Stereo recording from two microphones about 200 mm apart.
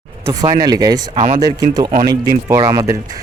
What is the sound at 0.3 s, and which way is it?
Speech, 20° right (ahead or behind).